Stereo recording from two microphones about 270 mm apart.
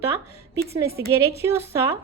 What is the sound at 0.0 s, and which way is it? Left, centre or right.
A woman's voice, centre.